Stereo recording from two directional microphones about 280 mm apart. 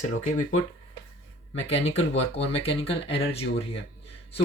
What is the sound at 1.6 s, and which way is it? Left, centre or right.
Speech, left.